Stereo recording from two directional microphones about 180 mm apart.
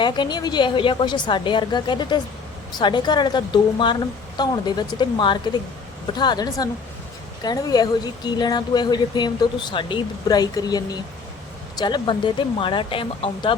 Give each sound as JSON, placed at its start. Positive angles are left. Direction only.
{"t": 0.0, "sound": "speech", "side_deg": 25}